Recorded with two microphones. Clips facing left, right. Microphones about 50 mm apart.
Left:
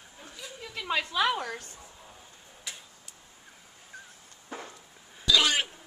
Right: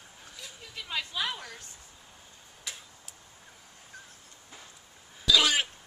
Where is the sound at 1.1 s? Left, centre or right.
Left.